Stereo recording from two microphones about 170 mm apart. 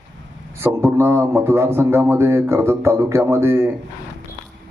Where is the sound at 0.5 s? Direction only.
15° right (ahead or behind).